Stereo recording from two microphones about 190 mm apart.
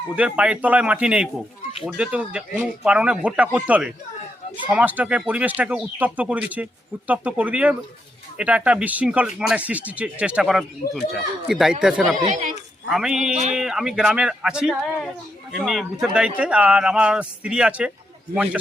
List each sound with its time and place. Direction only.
0.2 s speech: 5° right (ahead or behind)
12.1 s speech: 40° right (ahead or behind)
12.9 s speech: 5° right (ahead or behind)